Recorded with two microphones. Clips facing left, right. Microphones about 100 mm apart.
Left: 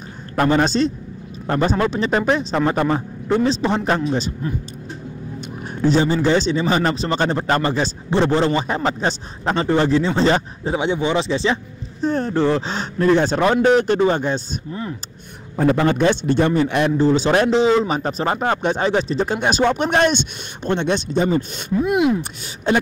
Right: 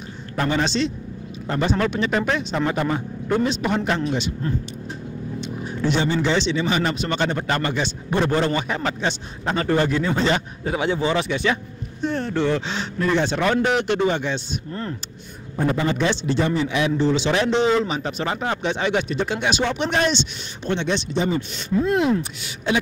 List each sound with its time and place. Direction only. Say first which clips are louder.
0.4 s speech: left 5 dB; 45° left (ahead or behind)
5.8 s speech: left 5 dB; 35° left (ahead or behind)
8.1 s speech: left 3 dB; 25° left (ahead or behind); by 14.4 s 40° left (ahead or behind)
14.7 s speech: left 2 dB; 10° left (ahead or behind)
15.5 s a man's voice: left 5 dB; 65° left (ahead or behind)
16.9 s speech: left 5 dB; 40° left (ahead or behind)
21.8 s speech: left 3 dB; 15° left (ahead or behind)